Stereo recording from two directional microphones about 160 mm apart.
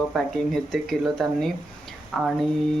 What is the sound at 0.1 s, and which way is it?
A man's voice, centre (ahead or behind).